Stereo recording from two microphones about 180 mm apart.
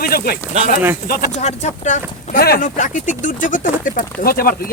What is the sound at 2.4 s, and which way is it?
Speech, 50° left (ahead or behind).